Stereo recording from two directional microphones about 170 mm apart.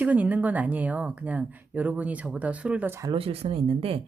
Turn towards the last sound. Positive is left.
turn(degrees=-35)  # may be behind; listen again after turning